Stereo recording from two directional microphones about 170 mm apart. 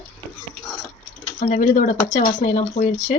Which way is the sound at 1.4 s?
50° left (ahead or behind).